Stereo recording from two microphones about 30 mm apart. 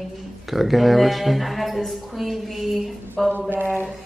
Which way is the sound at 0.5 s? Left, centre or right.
Centre.